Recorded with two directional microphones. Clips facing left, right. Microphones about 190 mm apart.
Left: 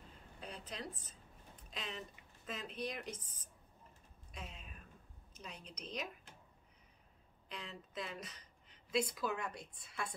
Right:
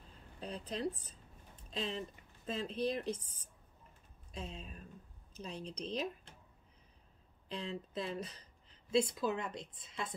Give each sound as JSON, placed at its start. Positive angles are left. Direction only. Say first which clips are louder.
{"t": 0.4, "sound": "a sound", "louder": "right 7 dB", "side_deg": -35}
{"t": 1.7, "sound": "speech", "louder": "right 7 dB", "side_deg": -30}
{"t": 4.3, "sound": "speech", "louder": "right 6 dB", "side_deg": -30}
{"t": 7.4, "sound": "a woman's voice", "louder": "right 8 dB", "side_deg": -30}